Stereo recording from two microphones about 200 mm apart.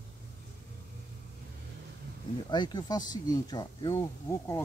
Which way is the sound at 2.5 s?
20° left (ahead or behind).